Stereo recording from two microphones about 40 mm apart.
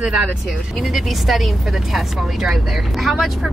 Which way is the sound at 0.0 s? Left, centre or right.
Right.